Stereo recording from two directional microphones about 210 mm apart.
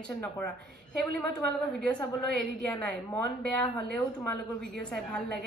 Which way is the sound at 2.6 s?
5° left (ahead or behind).